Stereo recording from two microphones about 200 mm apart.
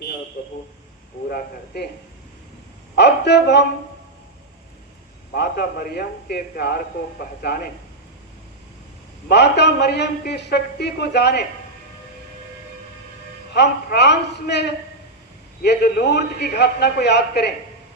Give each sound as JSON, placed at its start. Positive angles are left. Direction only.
{"t": 1.3, "sound": "a man's voice", "side_deg": 55}
{"t": 2.9, "sound": "bow-wow", "side_deg": 55}
{"t": 5.3, "sound": "a man's voice", "side_deg": 50}
{"t": 9.3, "sound": "a man's voice", "side_deg": 55}
{"t": 13.5, "sound": "a man's voice", "side_deg": 55}